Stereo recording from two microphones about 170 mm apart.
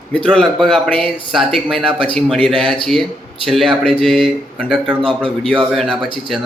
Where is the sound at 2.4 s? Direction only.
30° right (ahead or behind).